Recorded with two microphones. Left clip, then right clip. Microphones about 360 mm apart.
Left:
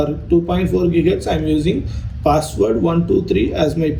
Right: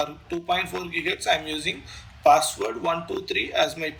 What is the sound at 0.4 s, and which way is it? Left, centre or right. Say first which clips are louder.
Speech: left 8 dB; left.